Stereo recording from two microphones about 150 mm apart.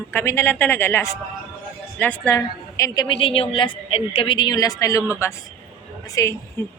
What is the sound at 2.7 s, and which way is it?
A woman's voice, 25° left (ahead or behind).